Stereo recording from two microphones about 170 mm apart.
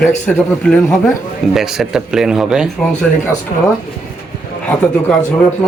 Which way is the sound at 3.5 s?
45° left (ahead or behind).